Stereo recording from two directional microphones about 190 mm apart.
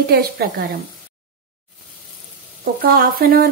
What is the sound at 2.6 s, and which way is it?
Speech, 50° right (ahead or behind).